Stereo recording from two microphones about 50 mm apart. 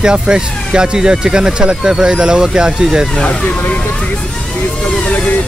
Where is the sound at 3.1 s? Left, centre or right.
Centre.